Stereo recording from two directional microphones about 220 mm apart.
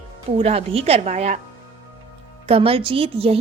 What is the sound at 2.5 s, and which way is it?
Speech, 25° right (ahead or behind).